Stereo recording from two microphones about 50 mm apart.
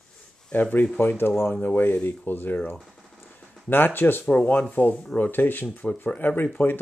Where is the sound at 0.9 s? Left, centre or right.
Left.